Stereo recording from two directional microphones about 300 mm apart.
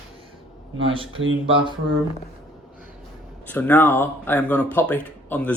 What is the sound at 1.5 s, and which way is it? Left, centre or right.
Speech, centre.